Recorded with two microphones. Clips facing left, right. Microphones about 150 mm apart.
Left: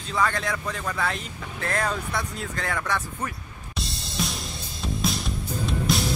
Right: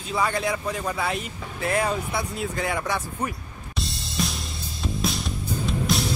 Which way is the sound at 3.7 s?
Centre (ahead or behind).